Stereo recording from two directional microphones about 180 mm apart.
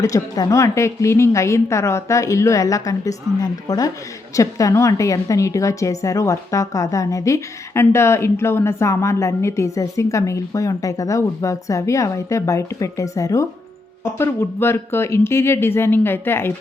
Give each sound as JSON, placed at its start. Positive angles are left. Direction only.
{"t": 0.0, "sound": "a woman's voice", "side_deg": 15}